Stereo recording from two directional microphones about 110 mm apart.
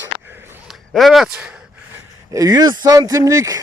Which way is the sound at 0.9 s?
Centre (ahead or behind).